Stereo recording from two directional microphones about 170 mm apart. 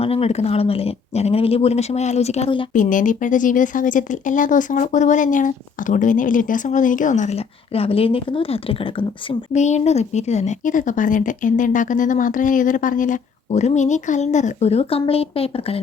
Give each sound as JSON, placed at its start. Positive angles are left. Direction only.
{"t": 0.0, "sound": "speech", "side_deg": 35}
{"t": 2.7, "sound": "speech", "side_deg": 50}
{"t": 9.5, "sound": "speech", "side_deg": 45}